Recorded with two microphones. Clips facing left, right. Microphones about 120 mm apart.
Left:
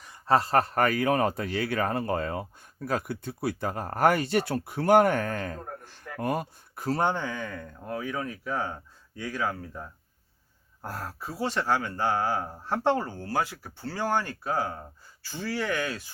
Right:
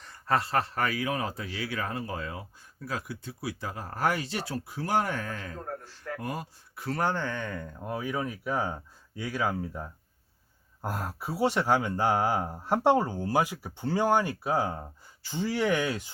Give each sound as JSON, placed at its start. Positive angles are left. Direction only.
{"t": 0.3, "sound": "a man's voice", "side_deg": 40}
{"t": 7.0, "sound": "speech", "side_deg": 15}